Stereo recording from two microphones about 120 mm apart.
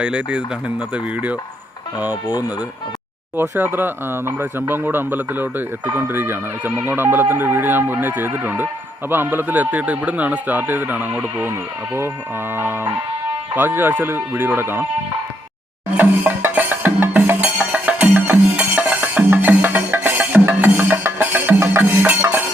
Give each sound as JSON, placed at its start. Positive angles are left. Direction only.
{"t": 0.0, "sound": "speech", "side_deg": -10}
{"t": 2.2, "sound": "speech", "side_deg": 30}
{"t": 3.3, "sound": "speech", "side_deg": -20}
{"t": 12.5, "sound": "music", "side_deg": -20}
{"t": 13.6, "sound": "speech", "side_deg": -15}
{"t": 16.0, "sound": "music", "side_deg": -15}